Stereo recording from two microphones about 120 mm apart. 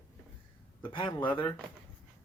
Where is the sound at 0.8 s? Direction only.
45° left (ahead or behind).